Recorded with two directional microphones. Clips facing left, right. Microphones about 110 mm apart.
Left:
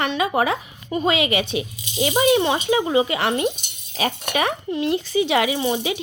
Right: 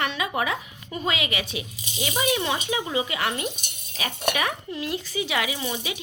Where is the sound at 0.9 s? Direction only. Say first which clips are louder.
Left 8 dB; 25° left (ahead or behind).